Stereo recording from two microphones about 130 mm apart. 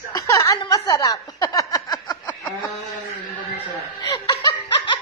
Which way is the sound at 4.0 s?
30° left (ahead or behind).